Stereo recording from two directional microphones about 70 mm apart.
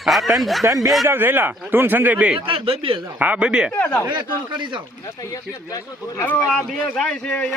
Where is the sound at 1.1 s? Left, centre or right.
Right; by 3.7 s centre.